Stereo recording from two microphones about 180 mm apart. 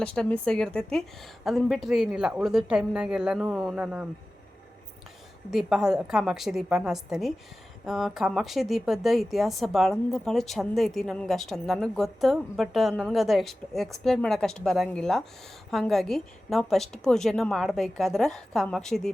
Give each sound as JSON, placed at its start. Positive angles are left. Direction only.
{"t": 0.0, "sound": "a woman's voice", "side_deg": 5}
{"t": 5.5, "sound": "a woman's voice", "side_deg": -5}